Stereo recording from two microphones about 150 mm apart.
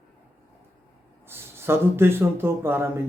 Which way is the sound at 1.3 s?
15° right (ahead or behind).